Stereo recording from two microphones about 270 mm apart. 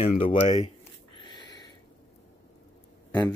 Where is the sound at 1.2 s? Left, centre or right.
Centre.